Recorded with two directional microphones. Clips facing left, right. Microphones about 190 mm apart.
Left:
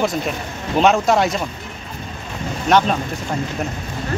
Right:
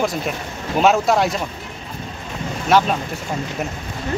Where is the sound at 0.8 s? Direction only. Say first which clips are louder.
Left 1 dB; centre (ahead or behind).